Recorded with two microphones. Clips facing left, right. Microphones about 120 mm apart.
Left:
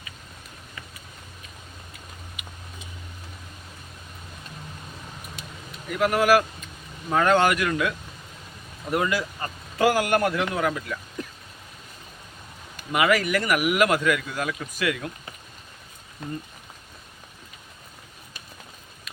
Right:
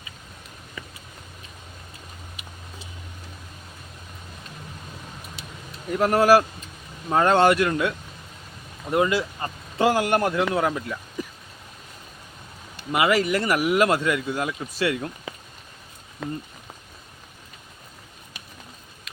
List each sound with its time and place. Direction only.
5.4 s vehicle: 50° left (ahead or behind)
5.9 s speech: 35° right (ahead or behind)
11.2 s a sound: 5° right (ahead or behind)
12.7 s speech: 25° right (ahead or behind)